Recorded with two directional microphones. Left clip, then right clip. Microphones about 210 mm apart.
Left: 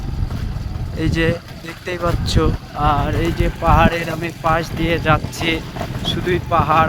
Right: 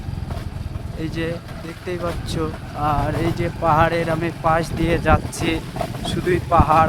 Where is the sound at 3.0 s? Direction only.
Centre (ahead or behind).